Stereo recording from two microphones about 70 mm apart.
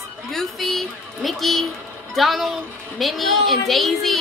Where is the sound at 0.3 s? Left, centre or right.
Centre.